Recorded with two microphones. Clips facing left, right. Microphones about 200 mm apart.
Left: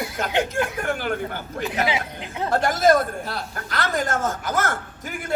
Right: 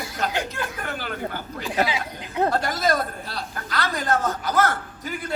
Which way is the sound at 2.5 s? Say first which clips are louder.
Left 5 dB; 50° left (ahead or behind).